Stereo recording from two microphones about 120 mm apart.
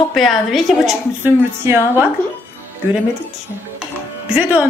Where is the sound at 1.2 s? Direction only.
20° right (ahead or behind).